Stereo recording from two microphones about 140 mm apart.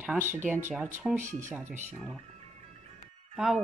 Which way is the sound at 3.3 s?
5° right (ahead or behind).